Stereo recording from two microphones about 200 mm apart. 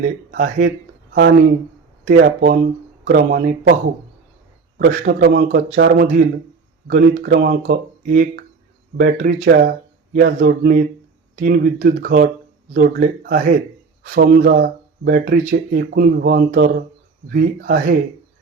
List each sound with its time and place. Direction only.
0.3 s speech: 45° right (ahead or behind)
4.8 s speech: 45° right (ahead or behind)
7.7 s speech: 40° right (ahead or behind)